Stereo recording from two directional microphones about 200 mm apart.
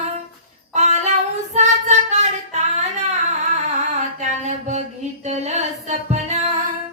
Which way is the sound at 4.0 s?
35° right (ahead or behind).